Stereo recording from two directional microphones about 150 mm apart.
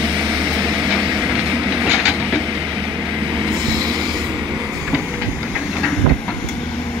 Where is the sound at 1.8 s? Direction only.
5° right (ahead or behind).